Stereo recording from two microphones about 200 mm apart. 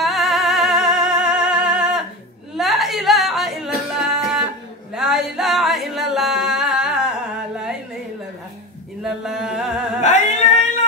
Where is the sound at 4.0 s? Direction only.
5° right (ahead or behind).